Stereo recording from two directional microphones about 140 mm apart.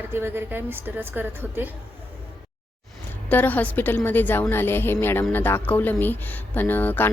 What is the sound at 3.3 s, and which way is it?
A woman's voice, 10° left (ahead or behind).